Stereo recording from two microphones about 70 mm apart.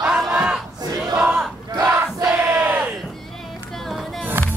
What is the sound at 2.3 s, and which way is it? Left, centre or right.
Crowd, right.